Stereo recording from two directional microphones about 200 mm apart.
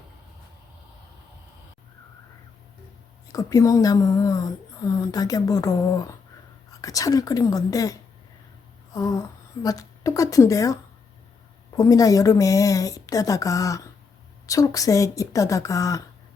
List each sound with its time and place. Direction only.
3.2 s speech: 15° left (ahead or behind)
8.9 s a sound: 15° left (ahead or behind)
9.6 s speech: 15° left (ahead or behind)
11.8 s speech: 15° left (ahead or behind)